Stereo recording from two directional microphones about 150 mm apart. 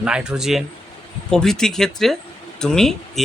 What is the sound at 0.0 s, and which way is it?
Speech, 5° right (ahead or behind).